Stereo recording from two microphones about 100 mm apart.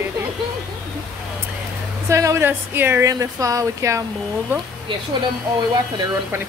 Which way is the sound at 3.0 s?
35° right (ahead or behind).